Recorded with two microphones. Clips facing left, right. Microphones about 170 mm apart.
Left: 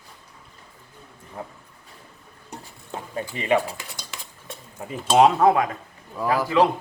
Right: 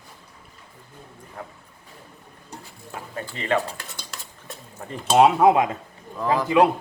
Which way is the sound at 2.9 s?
15° left (ahead or behind).